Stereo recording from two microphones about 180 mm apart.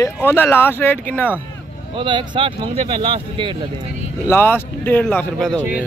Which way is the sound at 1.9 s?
25° right (ahead or behind).